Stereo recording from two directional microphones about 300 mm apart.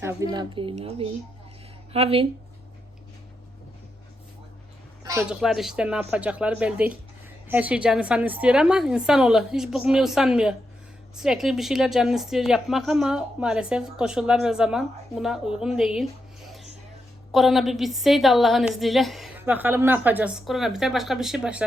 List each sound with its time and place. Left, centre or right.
0.0 s speech: centre
5.0 s a woman's voice: centre
17.3 s a woman's voice: centre